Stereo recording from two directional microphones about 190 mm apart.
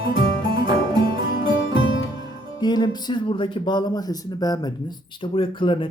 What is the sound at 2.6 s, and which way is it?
Speech, 20° left (ahead or behind).